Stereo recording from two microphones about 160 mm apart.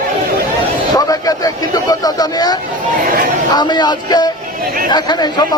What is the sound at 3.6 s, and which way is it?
Speech, 25° left (ahead or behind).